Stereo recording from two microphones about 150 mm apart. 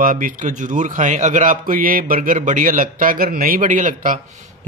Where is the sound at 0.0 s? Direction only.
65° right (ahead or behind).